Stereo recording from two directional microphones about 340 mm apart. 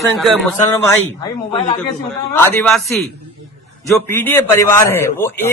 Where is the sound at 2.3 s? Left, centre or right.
Centre.